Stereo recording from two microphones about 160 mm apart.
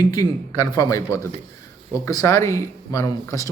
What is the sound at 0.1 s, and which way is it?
A man's voice, 20° left (ahead or behind).